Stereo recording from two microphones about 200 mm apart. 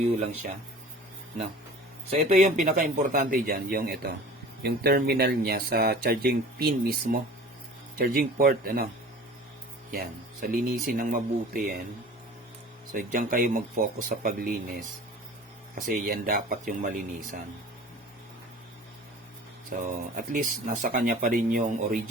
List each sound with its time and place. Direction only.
2.0 s speech: 35° right (ahead or behind)
9.9 s speech: 50° right (ahead or behind)
12.9 s speech: 45° right (ahead or behind)
19.7 s speech: 40° right (ahead or behind)